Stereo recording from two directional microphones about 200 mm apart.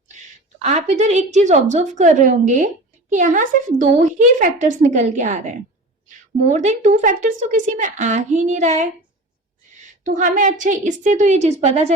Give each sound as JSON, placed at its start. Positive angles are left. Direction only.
{"t": 0.6, "sound": "a woman's voice", "side_deg": -35}
{"t": 6.5, "sound": "a woman's voice", "side_deg": -35}
{"t": 10.0, "sound": "a woman's voice", "side_deg": -40}